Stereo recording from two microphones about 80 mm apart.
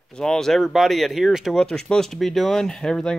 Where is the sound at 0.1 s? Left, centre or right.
Centre.